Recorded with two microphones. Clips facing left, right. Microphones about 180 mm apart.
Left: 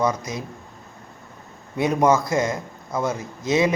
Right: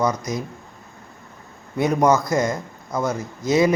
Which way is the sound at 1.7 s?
25° left (ahead or behind).